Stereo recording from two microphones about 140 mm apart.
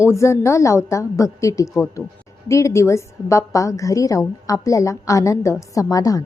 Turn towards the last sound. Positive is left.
turn(degrees=25)  # may be behind; listen again after turning